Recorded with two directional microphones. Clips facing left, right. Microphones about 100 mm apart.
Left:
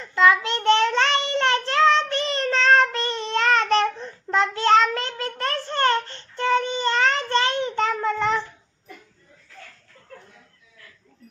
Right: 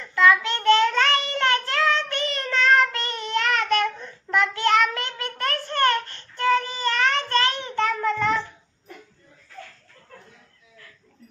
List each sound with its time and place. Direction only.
0.0 s child singing: 25° left (ahead or behind)